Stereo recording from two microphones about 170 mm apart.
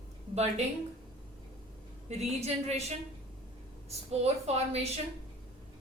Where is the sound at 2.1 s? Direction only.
40° right (ahead or behind).